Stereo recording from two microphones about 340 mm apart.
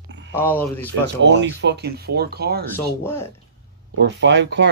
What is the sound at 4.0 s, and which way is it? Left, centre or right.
Speech, right.